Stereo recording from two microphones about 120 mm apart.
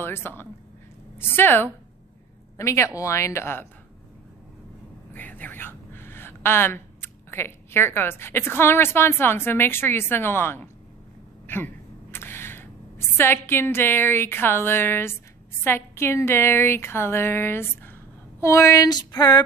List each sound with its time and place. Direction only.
0.0 s a woman's voice: 20° left (ahead or behind)
5.1 s a woman's voice: 15° left (ahead or behind)
18.4 s a sound: 25° left (ahead or behind)